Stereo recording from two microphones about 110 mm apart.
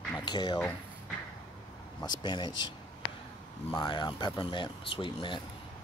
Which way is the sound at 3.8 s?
45° left (ahead or behind).